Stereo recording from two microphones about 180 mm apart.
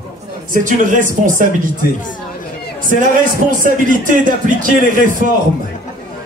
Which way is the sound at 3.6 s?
45° right (ahead or behind).